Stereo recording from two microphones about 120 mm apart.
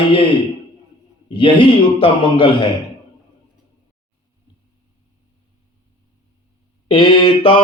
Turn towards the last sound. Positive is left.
turn(degrees=45)  # may be behind; listen again after turning